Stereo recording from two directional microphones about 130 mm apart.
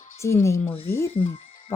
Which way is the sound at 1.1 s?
45° left (ahead or behind).